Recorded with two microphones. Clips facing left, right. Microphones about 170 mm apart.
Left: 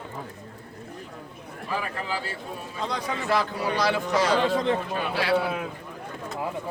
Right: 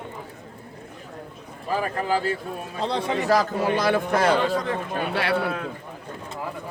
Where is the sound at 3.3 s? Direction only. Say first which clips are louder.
Right 4 dB; 45° right (ahead or behind).